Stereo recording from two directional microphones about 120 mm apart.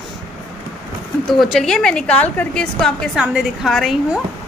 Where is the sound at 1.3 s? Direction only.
Centre (ahead or behind).